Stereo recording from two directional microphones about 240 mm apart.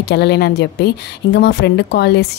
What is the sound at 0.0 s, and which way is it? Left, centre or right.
A woman's voice, left.